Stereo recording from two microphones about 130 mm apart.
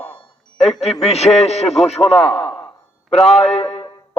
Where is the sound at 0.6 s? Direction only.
55° left (ahead or behind).